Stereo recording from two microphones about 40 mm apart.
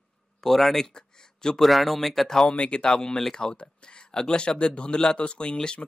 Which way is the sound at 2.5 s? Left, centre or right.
Left.